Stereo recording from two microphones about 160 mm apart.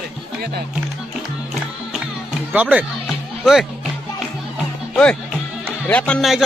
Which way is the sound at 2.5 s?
10° right (ahead or behind).